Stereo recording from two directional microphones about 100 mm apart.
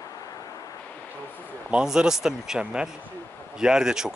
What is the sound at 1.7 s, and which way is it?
Speech, 10° right (ahead or behind).